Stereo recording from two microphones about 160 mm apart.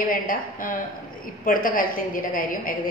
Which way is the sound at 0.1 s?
60° left (ahead or behind).